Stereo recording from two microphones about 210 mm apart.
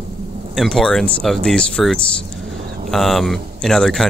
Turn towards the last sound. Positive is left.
turn(degrees=0)  # may be behind; listen again after turning